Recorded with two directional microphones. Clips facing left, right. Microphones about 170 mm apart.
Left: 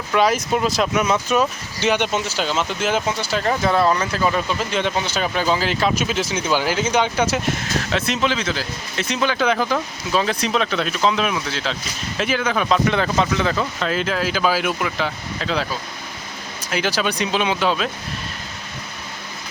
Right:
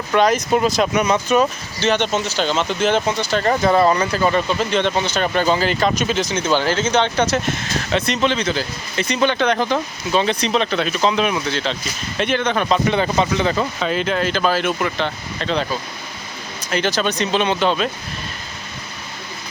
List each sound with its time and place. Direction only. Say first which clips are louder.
0.1 s speech: right 2 dB; 5° left (ahead or behind)